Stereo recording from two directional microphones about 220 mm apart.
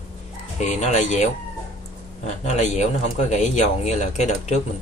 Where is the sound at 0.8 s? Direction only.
30° left (ahead or behind).